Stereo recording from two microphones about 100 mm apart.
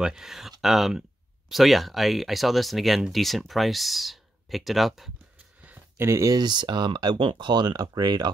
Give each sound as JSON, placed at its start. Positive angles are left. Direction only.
{"t": 0.0, "sound": "speech", "side_deg": -5}
{"t": 5.6, "sound": "a sound", "side_deg": -15}
{"t": 6.0, "sound": "speech", "side_deg": -30}